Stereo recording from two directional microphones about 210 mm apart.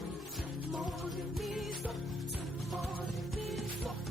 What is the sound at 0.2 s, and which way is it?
Music, centre (ahead or behind).